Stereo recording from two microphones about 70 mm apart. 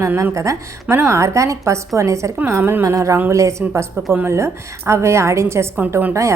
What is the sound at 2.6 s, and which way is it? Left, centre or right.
Speech, right.